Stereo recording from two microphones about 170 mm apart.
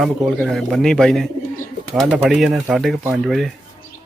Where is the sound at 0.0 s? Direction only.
Centre (ahead or behind).